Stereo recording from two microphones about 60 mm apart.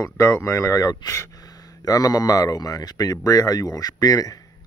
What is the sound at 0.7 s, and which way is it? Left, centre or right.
Speech, left.